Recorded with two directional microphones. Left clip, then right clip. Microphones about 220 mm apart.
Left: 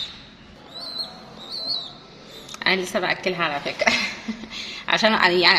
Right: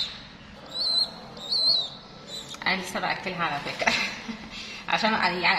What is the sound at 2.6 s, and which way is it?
A woman's voice, 40° left (ahead or behind).